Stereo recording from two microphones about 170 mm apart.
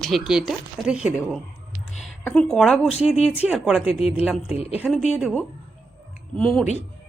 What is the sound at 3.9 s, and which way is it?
Speech, 35° left (ahead or behind).